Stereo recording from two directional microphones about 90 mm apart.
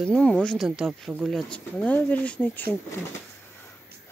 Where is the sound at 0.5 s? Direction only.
5° right (ahead or behind).